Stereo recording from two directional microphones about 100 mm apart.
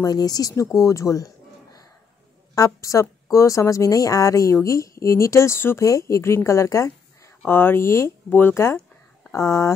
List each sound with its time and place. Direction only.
0.0 s a woman's voice: 40° left (ahead or behind)